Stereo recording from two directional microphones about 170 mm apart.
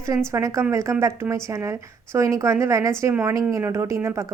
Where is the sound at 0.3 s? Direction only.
15° right (ahead or behind).